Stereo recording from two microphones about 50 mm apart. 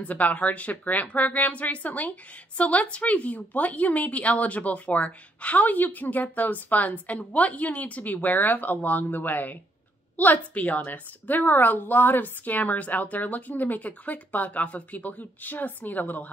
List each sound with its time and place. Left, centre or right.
0.0 s speech: left